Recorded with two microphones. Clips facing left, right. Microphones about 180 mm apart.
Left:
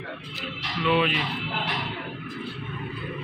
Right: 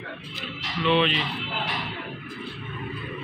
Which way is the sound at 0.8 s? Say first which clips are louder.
Right 1 dB; 5° left (ahead or behind).